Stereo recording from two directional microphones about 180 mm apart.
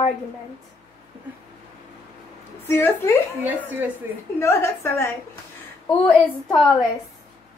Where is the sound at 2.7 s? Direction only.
15° left (ahead or behind).